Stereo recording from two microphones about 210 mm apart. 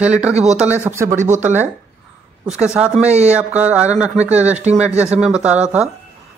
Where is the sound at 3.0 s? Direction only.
30° right (ahead or behind).